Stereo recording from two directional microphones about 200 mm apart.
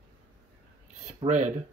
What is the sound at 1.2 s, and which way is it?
Speech, 35° right (ahead or behind).